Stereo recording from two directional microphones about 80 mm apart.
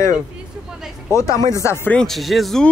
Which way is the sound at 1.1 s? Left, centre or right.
Left.